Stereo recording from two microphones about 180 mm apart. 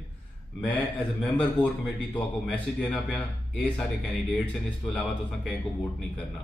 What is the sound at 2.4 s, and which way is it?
Speech, 10° left (ahead or behind).